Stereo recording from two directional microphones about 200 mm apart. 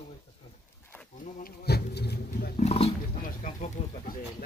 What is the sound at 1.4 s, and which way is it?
Speech, 55° left (ahead or behind).